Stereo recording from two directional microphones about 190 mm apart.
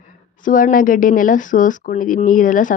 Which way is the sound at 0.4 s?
45° left (ahead or behind).